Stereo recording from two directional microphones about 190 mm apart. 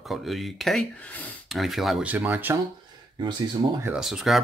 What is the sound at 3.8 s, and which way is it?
Speech, 5° right (ahead or behind).